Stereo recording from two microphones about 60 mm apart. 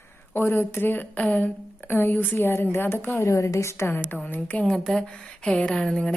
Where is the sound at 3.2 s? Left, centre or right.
Left.